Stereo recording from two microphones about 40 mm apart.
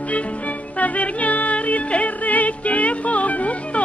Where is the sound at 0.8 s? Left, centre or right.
Left.